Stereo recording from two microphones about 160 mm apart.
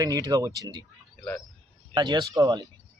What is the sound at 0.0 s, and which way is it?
Speech, 25° right (ahead or behind).